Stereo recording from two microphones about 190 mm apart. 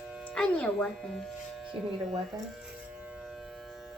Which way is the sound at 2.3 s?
20° right (ahead or behind).